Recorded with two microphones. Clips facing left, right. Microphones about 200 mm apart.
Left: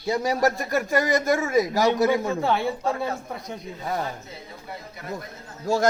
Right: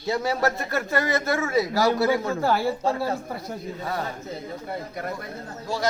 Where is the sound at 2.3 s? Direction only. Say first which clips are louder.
Right 1 dB; centre (ahead or behind).